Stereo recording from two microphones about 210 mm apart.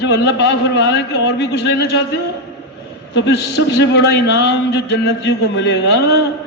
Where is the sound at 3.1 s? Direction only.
55° left (ahead or behind).